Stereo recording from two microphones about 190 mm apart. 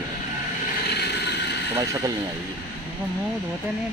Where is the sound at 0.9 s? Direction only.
60° left (ahead or behind).